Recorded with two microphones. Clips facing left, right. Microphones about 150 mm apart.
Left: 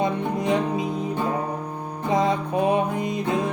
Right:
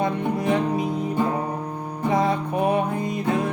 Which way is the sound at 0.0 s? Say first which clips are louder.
Even; 20° left (ahead or behind).